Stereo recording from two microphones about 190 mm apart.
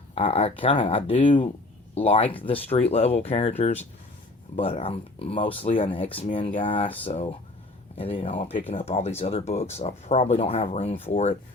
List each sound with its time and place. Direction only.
0.1 s speech: 30° left (ahead or behind)